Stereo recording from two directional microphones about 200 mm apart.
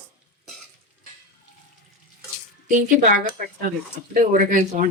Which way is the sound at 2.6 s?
40° right (ahead or behind).